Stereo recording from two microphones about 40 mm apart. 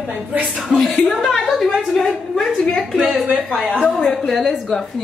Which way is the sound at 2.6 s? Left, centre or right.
Centre.